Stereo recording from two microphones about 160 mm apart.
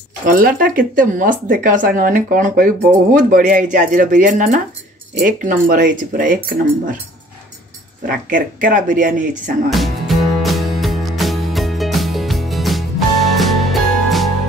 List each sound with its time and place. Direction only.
0.2 s speech: 60° right (ahead or behind)
8.3 s speech: 55° right (ahead or behind)
9.7 s music: centre (ahead or behind)